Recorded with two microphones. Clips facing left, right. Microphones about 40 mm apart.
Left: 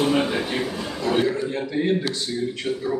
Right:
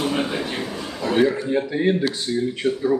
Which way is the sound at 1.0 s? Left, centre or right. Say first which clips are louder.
Right 3 dB; centre.